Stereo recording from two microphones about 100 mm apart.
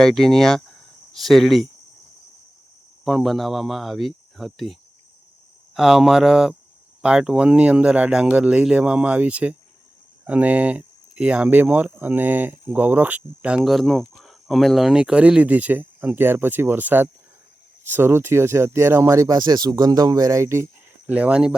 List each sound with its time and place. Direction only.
0.0 s speech: 5° left (ahead or behind)
3.0 s speech: centre (ahead or behind)
13.7 s speech: centre (ahead or behind); by 20.7 s 30° right (ahead or behind)
21.1 s speech: 10° right (ahead or behind)